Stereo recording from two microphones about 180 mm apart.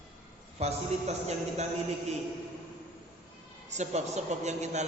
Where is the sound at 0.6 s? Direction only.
40° right (ahead or behind).